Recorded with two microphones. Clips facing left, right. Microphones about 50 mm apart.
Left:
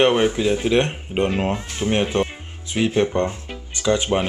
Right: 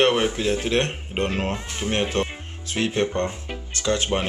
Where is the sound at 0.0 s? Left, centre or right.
Centre.